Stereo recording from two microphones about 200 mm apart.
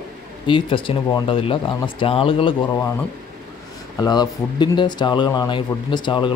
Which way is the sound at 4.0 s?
20° left (ahead or behind).